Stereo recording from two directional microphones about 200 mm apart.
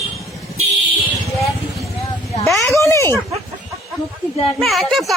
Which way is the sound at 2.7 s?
15° left (ahead or behind).